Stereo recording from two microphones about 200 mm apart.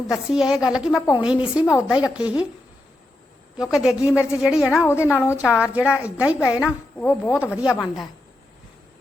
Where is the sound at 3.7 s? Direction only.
Centre (ahead or behind).